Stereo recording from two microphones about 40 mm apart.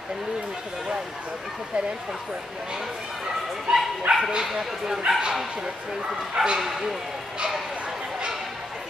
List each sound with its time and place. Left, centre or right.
3.7 s speech: centre
4.1 s speech: right
4.5 s speech: centre
6.3 s speech: right
6.6 s speech: centre